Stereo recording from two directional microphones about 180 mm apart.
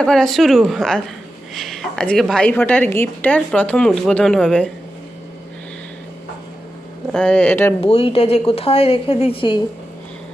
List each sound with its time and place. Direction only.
0.0 s a woman's voice: 5° left (ahead or behind)
7.1 s speech: 5° left (ahead or behind)
7.9 s a woman's voice: 35° left (ahead or behind)